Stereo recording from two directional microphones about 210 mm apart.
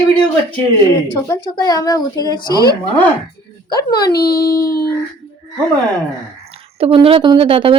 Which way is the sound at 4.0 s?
50° left (ahead or behind).